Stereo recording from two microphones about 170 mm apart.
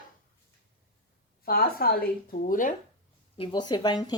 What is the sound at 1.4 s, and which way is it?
Speech, 60° left (ahead or behind).